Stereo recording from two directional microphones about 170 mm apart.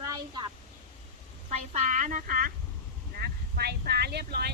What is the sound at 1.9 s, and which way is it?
Speech, 50° right (ahead or behind).